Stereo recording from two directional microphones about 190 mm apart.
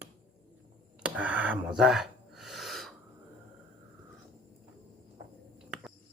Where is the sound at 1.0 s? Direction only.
5° right (ahead or behind).